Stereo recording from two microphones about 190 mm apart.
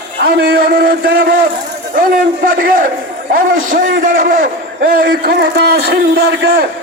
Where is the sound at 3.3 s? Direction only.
45° right (ahead or behind).